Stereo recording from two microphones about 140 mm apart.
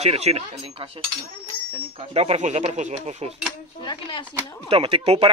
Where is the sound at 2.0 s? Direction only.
45° right (ahead or behind).